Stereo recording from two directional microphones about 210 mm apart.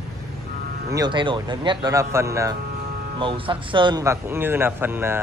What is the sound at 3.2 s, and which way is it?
A man's voice, 25° right (ahead or behind).